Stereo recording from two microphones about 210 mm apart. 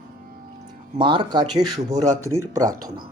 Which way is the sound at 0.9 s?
25° right (ahead or behind).